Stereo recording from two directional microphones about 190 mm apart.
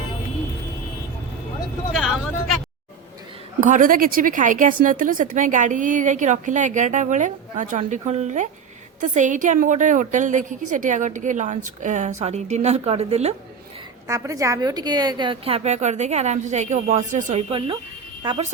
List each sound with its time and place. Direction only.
1.9 s vehicle: centre (ahead or behind)
3.6 s speech: 45° right (ahead or behind)
14.1 s speech: 15° right (ahead or behind); by 17.4 s 40° right (ahead or behind)
18.2 s speech: 25° right (ahead or behind)